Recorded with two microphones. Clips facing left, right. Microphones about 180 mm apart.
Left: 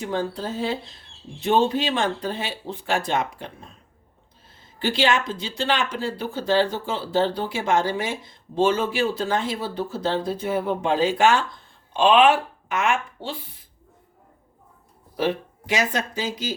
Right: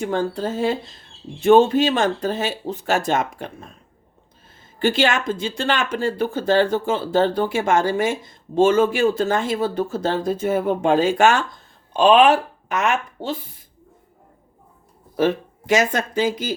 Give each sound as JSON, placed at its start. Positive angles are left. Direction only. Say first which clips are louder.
{"t": 0.0, "sound": "speech", "louder": "right 4 dB", "side_deg": -50}
{"t": 4.8, "sound": "speech", "louder": "right 3 dB", "side_deg": -50}
{"t": 15.1, "sound": "speech", "louder": "right 5 dB", "side_deg": -45}